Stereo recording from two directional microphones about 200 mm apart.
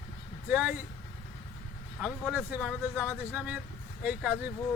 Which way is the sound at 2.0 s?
5° right (ahead or behind).